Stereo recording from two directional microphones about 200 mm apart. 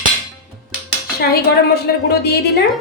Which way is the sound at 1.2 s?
50° left (ahead or behind).